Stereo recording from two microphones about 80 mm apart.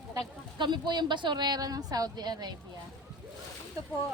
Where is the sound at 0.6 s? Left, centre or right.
Right.